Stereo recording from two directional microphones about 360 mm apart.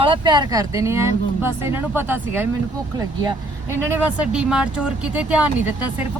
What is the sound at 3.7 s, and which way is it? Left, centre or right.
A woman's voice, centre.